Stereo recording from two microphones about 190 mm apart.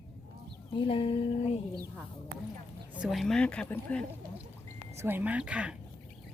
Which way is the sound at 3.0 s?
Centre (ahead or behind).